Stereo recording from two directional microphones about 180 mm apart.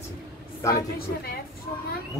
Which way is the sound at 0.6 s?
20° left (ahead or behind).